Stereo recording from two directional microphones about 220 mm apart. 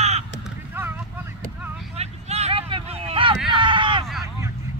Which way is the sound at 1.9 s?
30° right (ahead or behind).